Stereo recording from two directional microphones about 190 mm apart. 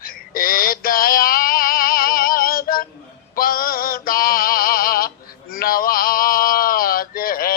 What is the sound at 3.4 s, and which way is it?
Male singing, 50° left (ahead or behind).